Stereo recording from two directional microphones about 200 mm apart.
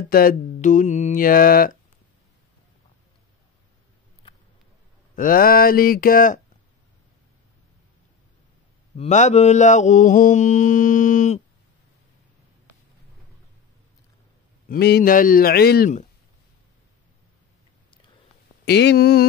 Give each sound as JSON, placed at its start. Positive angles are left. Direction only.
{"t": 0.1, "sound": "mantra", "side_deg": 45}
{"t": 5.1, "sound": "mantra", "side_deg": 45}
{"t": 8.9, "sound": "mantra", "side_deg": 35}
{"t": 14.7, "sound": "mantra", "side_deg": 50}
{"t": 18.7, "sound": "mantra", "side_deg": 55}